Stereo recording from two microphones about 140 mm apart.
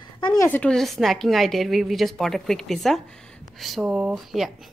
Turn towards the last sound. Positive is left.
turn(degrees=0)  # may be behind; listen again after turning